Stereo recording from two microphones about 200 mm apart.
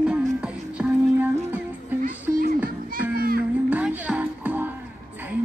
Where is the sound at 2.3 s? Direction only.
45° right (ahead or behind).